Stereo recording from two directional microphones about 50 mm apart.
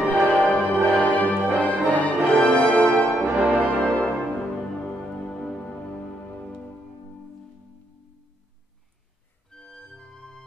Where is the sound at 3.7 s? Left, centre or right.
Left.